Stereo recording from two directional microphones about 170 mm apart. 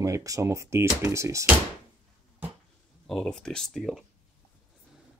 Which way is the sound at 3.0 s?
Centre (ahead or behind).